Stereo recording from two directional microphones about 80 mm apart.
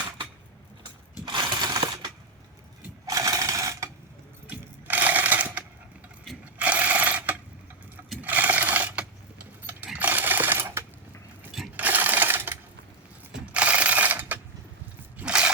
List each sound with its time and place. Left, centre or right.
1.2 s sewing machine: right
3.1 s sewing machine: right
4.4 s a sound: right
6.4 s mechanisms: centre
8.2 s sewing machine: right
13.3 s ratchet: centre
15.2 s a sound: centre